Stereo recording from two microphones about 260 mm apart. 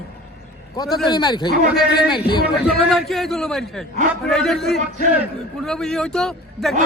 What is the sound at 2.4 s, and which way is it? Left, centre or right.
A man's voice, centre.